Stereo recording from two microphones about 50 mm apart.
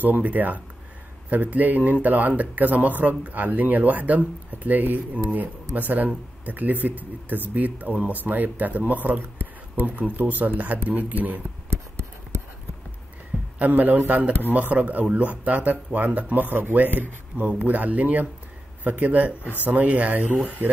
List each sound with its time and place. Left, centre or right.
0.0 s speech: right
11.7 s a sound: right
13.6 s speech: right